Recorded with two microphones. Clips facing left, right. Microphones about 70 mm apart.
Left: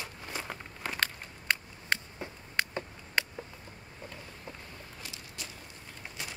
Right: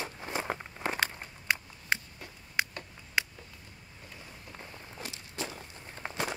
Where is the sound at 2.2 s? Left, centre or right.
Left.